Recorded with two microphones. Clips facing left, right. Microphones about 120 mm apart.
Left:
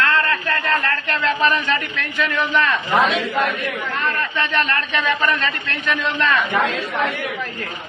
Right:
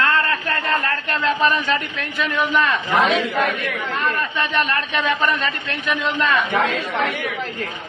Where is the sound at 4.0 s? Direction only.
10° right (ahead or behind).